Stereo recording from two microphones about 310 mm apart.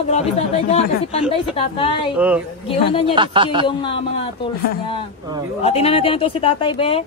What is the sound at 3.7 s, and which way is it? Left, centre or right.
Speech, centre.